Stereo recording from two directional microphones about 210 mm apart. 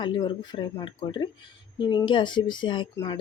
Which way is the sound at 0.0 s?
20° left (ahead or behind).